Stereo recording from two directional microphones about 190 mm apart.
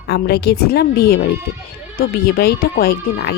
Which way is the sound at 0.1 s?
60° left (ahead or behind).